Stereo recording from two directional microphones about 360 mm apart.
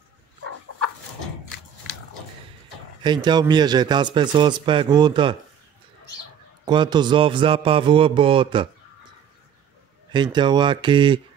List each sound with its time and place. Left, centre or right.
0.4 s a sound: right
3.0 s a man's voice: centre
6.6 s a man's voice: centre
10.1 s a man's voice: centre